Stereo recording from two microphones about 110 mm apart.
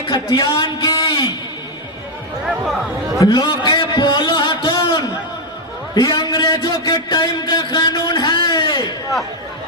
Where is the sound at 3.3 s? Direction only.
45° left (ahead or behind).